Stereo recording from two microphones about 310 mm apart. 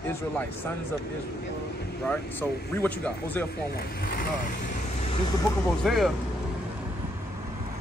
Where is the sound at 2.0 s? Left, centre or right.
Centre.